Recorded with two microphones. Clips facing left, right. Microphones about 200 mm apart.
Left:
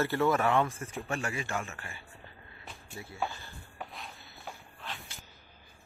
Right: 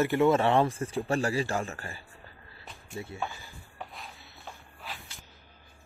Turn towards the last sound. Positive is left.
turn(degrees=-5)  # may be behind; listen again after turning